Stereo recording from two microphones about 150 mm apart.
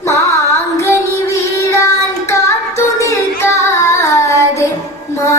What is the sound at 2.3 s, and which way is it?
Music, 20° left (ahead or behind).